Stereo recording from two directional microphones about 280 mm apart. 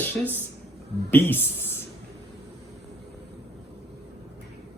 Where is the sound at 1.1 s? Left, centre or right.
Centre.